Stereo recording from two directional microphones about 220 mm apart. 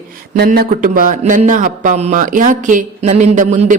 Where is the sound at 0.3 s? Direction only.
45° right (ahead or behind).